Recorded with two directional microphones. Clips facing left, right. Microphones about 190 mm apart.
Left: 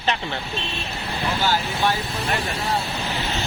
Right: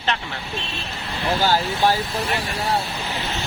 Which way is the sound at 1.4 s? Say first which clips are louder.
Right 4 dB; 45° right (ahead or behind).